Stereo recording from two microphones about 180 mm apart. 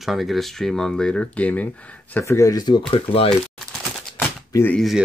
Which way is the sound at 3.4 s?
Centre (ahead or behind).